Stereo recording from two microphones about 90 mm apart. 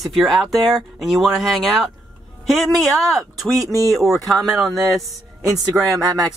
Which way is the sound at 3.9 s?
Centre (ahead or behind).